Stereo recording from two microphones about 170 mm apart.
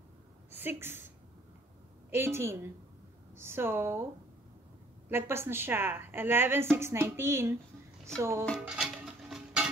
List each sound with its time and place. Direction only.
0.5 s a woman's voice: 10° right (ahead or behind)
2.0 s a woman's voice: 15° right (ahead or behind)
5.1 s a woman's voice: 15° right (ahead or behind)
8.5 s music: 5° right (ahead or behind)